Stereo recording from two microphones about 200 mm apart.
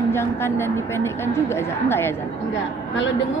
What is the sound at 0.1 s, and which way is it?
A woman's voice, 10° left (ahead or behind).